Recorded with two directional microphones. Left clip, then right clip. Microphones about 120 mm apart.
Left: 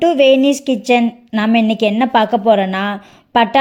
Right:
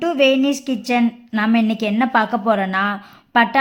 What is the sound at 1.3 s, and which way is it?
A woman's voice, 25° left (ahead or behind).